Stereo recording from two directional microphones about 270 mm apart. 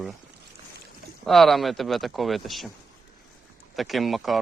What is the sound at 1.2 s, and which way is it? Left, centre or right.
Speech, centre.